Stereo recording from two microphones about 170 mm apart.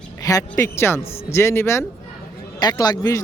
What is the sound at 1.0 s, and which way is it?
Speech, 35° left (ahead or behind).